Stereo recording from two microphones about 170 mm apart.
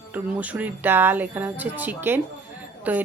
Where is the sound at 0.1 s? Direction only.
10° right (ahead or behind).